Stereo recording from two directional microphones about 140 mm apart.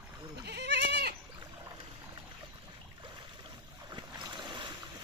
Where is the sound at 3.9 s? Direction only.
30° right (ahead or behind).